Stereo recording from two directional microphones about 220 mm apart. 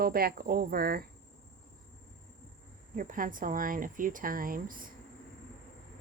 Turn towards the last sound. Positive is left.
turn(degrees=-40)  # may be behind; listen again after turning